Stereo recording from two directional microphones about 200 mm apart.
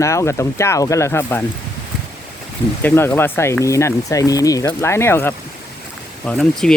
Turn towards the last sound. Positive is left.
turn(degrees=0)  # may be behind; listen again after turning